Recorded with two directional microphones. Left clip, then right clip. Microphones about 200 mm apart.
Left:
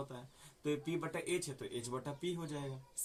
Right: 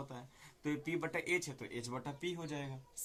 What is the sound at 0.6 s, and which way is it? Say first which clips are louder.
Speech: even; 25° right (ahead or behind).